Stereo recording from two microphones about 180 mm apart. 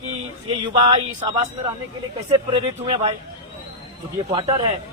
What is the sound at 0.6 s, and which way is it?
Speech, 25° right (ahead or behind).